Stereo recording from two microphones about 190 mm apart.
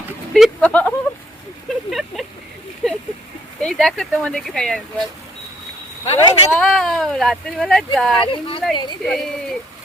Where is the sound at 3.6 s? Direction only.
5° left (ahead or behind).